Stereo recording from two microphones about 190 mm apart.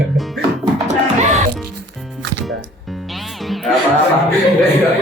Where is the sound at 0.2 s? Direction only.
Centre (ahead or behind).